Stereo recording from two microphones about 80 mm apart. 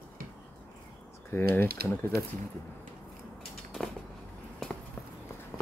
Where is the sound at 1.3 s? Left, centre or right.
Left.